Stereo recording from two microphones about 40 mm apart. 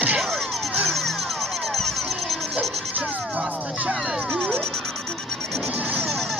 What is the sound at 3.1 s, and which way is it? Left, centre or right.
Music, right.